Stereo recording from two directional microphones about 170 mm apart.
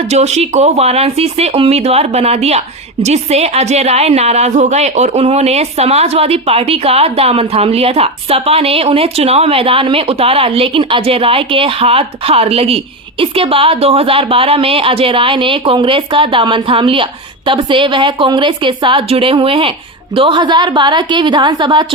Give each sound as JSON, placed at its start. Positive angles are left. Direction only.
{"t": 0.1, "sound": "a woman's voice", "side_deg": -40}